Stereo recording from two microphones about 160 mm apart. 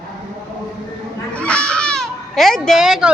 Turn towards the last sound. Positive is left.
turn(degrees=-5)  # may be behind; listen again after turning